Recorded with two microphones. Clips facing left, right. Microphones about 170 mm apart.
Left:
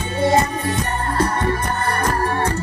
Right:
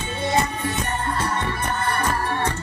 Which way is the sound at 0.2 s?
40° left (ahead or behind).